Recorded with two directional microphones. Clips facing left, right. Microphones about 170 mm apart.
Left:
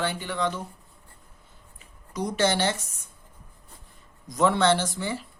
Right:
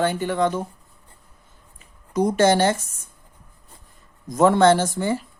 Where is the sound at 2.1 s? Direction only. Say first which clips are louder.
Right 7 dB; 50° right (ahead or behind).